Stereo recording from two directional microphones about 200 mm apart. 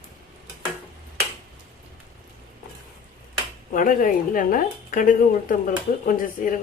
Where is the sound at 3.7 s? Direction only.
40° left (ahead or behind).